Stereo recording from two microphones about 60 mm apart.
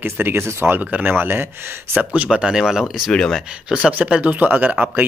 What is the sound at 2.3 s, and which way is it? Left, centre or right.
Speech, centre.